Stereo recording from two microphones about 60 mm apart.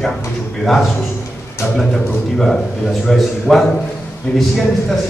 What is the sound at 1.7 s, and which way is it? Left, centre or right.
A man's voice, centre.